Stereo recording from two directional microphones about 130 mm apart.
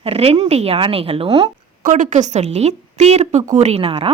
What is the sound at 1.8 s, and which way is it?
A woman's voice, 75° right (ahead or behind).